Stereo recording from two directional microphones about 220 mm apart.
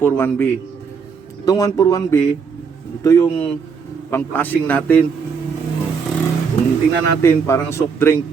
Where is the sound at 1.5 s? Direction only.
15° left (ahead or behind).